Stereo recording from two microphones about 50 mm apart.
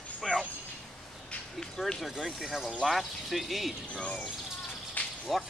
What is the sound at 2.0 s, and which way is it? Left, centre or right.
Speech, centre.